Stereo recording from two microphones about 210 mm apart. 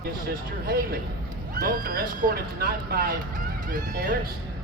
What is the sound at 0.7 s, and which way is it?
Speech, 45° right (ahead or behind).